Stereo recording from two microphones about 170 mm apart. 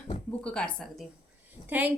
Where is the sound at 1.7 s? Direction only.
10° right (ahead or behind).